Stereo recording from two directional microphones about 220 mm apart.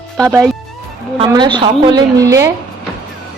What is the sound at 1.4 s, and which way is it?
A woman's voice, 20° right (ahead or behind).